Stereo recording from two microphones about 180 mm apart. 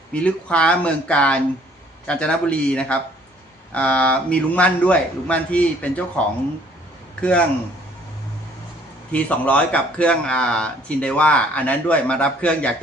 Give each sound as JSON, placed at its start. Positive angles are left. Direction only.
{"t": 0.1, "sound": "a man's voice", "side_deg": 5}
{"t": 9.1, "sound": "a man's voice", "side_deg": 10}